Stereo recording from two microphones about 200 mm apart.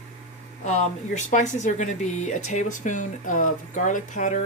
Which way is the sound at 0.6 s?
35° left (ahead or behind).